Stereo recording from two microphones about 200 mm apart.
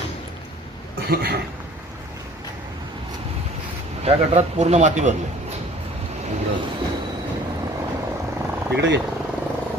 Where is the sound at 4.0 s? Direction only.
30° right (ahead or behind).